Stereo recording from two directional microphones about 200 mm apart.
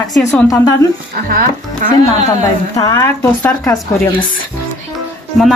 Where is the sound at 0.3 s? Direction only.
15° left (ahead or behind).